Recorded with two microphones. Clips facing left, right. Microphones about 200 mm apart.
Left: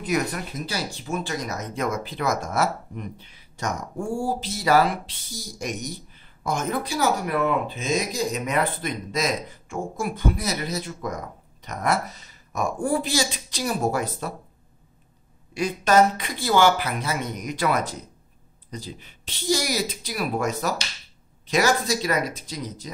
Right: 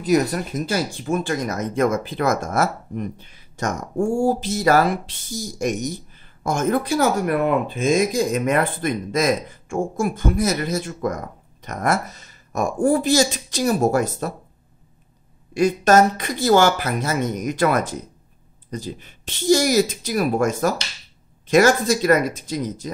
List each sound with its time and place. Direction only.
0.0 s speech: 40° right (ahead or behind)
15.5 s speech: 45° right (ahead or behind)